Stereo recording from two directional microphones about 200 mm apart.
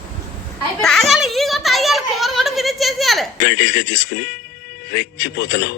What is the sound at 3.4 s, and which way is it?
Speech, 50° left (ahead or behind).